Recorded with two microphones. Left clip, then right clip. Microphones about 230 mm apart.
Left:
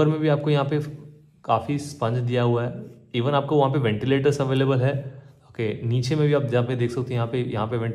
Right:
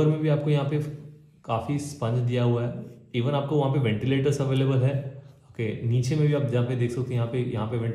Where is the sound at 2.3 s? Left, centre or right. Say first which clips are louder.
Left 4 dB; centre.